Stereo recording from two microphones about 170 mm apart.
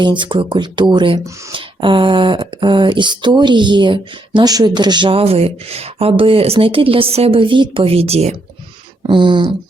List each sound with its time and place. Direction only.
0.0 s speech: 30° right (ahead or behind)